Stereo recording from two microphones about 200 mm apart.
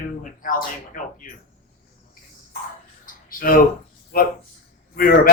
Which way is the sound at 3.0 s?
45° left (ahead or behind).